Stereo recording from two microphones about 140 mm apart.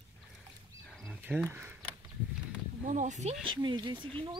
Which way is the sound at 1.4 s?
20° right (ahead or behind).